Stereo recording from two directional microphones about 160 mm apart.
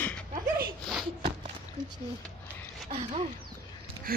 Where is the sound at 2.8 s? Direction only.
40° right (ahead or behind).